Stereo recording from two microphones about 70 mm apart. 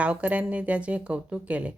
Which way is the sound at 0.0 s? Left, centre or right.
Centre.